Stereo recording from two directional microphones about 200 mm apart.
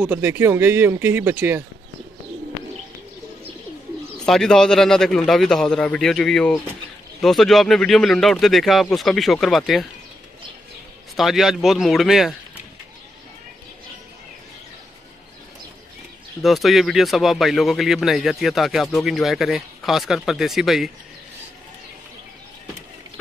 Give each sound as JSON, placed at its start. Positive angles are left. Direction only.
{"t": 0.0, "sound": "speech", "side_deg": -10}
{"t": 4.3, "sound": "speech", "side_deg": 0}
{"t": 11.1, "sound": "speech", "side_deg": 0}
{"t": 16.4, "sound": "speech", "side_deg": 0}